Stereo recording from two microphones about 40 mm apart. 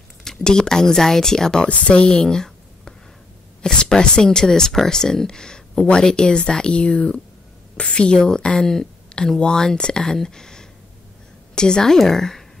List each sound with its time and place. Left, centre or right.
0.2 s speech: centre
1.7 s speech: left
2.2 s a sound: centre
3.6 s a woman's voice: centre